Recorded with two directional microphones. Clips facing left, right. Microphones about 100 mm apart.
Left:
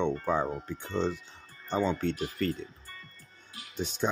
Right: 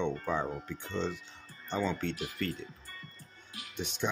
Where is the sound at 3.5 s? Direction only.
35° left (ahead or behind).